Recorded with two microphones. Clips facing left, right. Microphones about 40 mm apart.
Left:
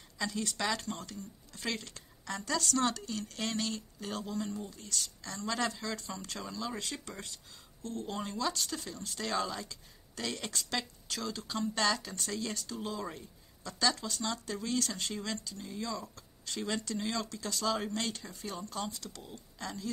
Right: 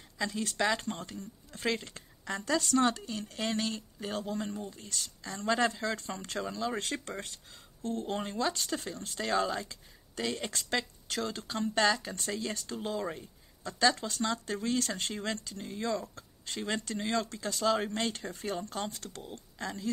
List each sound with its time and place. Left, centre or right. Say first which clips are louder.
0.2 s speech: right 3 dB; right
0.8 s speech: right 2 dB; right
3.3 s speech: right 3 dB; centre
4.1 s speech: right 2 dB; right
4.7 s speech: left 1 dB; right
5.9 s speech: right 4 dB; right
10.2 s speech: right 3 dB; centre
10.5 s speech: right 3 dB; right
12.5 s speech: right 3 dB; right
18.1 s speech: right 6 dB; right
19.6 s speech: right 3 dB; right